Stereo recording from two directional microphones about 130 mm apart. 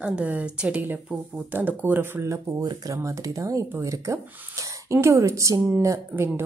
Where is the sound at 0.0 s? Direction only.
10° right (ahead or behind).